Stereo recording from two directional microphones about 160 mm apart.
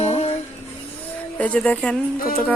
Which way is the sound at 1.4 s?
5° left (ahead or behind).